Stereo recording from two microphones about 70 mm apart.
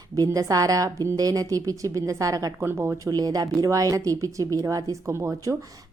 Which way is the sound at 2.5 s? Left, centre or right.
Right.